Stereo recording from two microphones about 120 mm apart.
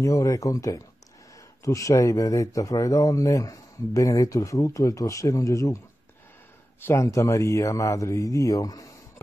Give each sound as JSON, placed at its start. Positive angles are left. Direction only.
{"t": 0.0, "sound": "speech", "side_deg": 25}
{"t": 6.9, "sound": "speech", "side_deg": 25}